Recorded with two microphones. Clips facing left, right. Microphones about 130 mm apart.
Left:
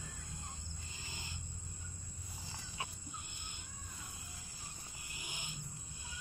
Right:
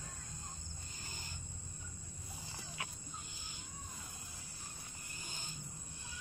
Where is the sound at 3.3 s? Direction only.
60° left (ahead or behind).